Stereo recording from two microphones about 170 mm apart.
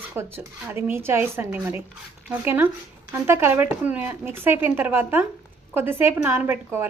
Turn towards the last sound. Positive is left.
turn(degrees=-15)  # may be behind; listen again after turning